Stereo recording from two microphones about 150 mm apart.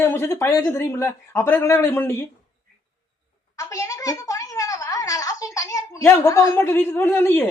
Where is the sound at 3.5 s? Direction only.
20° left (ahead or behind).